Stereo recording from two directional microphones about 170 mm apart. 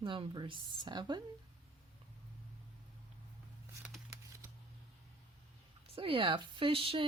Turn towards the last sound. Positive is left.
turn(degrees=-30)  # may be behind; listen again after turning